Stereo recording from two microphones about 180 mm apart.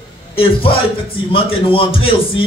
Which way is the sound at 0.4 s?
30° left (ahead or behind).